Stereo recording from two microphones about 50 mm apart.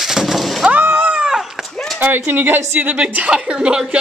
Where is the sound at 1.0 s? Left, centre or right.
Right.